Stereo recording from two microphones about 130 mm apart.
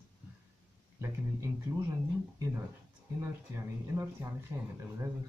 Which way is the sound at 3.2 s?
20° right (ahead or behind).